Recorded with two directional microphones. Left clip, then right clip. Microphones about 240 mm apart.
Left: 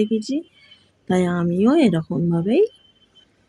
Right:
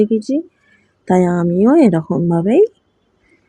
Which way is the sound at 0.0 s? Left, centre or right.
Centre.